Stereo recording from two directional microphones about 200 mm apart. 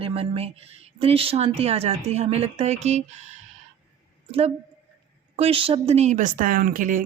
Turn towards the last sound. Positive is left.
turn(degrees=-45)  # may be behind; listen again after turning